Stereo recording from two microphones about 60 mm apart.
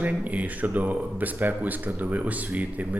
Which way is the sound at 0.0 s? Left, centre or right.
Right.